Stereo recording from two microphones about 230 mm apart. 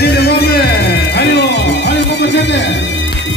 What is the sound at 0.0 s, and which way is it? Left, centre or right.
Music, left.